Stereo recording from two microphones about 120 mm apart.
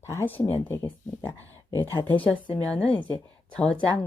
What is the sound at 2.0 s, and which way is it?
Speech, 15° left (ahead or behind).